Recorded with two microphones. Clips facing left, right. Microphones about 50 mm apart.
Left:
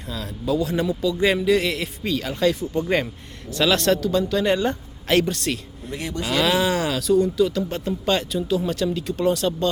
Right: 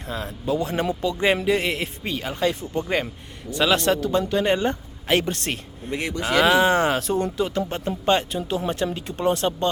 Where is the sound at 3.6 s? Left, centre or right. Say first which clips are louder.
Left 1 dB; centre.